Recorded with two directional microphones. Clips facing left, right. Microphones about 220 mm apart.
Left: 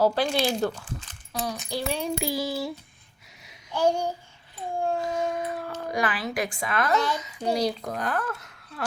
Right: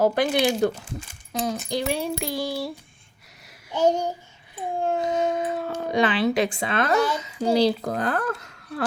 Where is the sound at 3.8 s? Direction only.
20° right (ahead or behind).